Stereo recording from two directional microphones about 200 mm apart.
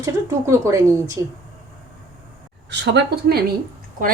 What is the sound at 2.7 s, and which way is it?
Speech, 60° right (ahead or behind).